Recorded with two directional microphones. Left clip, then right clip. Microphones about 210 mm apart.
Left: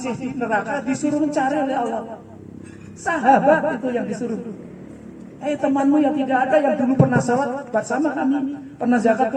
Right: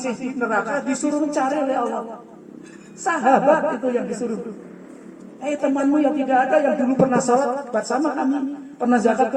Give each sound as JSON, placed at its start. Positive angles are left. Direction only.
{"t": 0.0, "sound": "a man's voice", "side_deg": -35}
{"t": 3.0, "sound": "a man's voice", "side_deg": -35}
{"t": 5.4, "sound": "a man's voice", "side_deg": -35}